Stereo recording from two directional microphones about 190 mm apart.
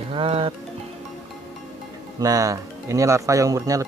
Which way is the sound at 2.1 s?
20° right (ahead or behind).